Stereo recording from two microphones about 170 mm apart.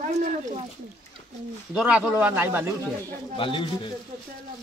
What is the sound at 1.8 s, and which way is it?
Speech, 5° right (ahead or behind).